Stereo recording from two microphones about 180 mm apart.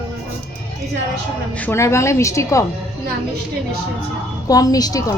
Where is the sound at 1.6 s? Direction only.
15° left (ahead or behind).